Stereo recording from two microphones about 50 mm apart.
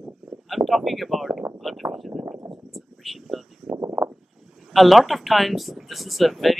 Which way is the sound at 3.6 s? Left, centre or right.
Right.